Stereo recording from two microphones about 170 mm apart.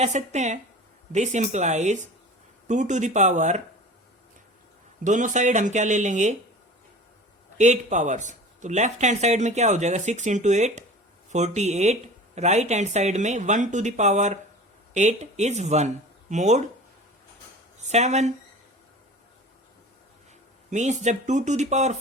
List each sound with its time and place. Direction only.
0.0 s speech: 40° right (ahead or behind)
5.0 s speech: 45° right (ahead or behind)
7.6 s speech: 45° right (ahead or behind)
17.7 s speech: 40° right (ahead or behind)
20.7 s speech: 45° right (ahead or behind)